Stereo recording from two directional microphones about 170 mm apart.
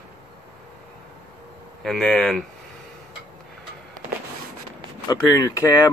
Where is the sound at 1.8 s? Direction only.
5° left (ahead or behind).